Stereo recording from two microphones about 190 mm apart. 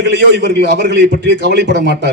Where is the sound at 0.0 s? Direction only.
65° right (ahead or behind).